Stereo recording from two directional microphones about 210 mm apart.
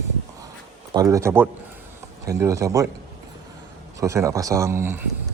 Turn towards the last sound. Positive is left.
turn(degrees=-10)  # may be behind; listen again after turning